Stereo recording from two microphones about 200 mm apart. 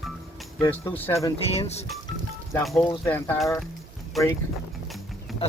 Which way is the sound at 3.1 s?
10° left (ahead or behind).